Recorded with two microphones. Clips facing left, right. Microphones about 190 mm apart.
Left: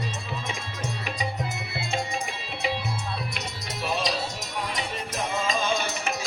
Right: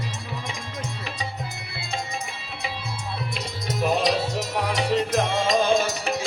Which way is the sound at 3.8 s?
55° right (ahead or behind).